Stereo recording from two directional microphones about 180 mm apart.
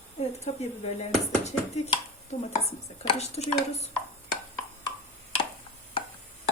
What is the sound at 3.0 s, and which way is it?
Speech, 35° left (ahead or behind).